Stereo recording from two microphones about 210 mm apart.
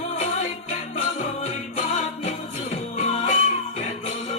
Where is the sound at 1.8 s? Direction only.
35° left (ahead or behind).